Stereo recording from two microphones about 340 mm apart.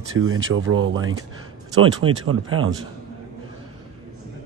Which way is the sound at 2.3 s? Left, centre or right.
Right.